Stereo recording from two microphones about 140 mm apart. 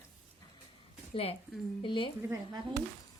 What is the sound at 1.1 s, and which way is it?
A woman's voice, 45° left (ahead or behind).